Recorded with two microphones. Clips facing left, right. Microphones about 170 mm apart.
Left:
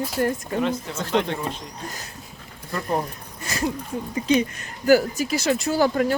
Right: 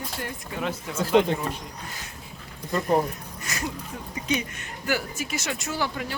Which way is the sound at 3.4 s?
30° left (ahead or behind).